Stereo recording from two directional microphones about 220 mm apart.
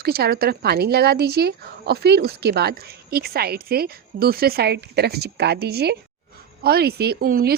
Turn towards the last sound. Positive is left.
turn(degrees=-45)  # may be behind; listen again after turning